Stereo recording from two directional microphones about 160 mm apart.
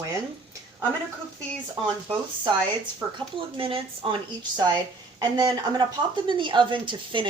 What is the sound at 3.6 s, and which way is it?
A woman's voice, 35° right (ahead or behind).